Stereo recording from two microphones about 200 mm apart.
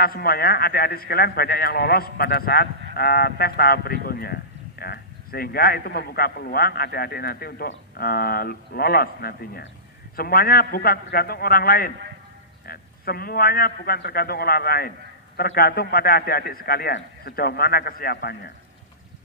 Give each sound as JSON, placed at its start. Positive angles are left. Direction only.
{"t": 0.0, "sound": "speech", "side_deg": 50}